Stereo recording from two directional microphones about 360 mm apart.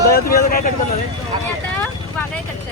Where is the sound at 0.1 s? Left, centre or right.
Left.